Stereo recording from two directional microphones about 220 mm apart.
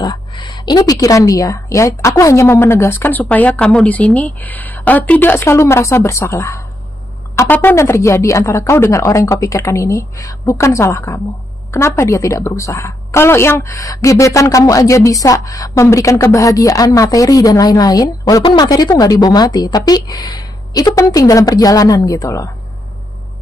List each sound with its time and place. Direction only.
0.0 s a woman's voice: 20° left (ahead or behind)